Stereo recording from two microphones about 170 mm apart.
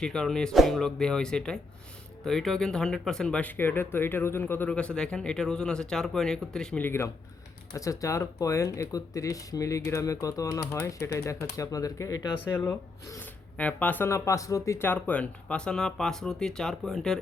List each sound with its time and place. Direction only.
0.0 s speech: 5° left (ahead or behind)